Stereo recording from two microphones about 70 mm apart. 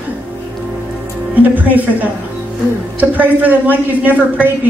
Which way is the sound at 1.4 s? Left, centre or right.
Right.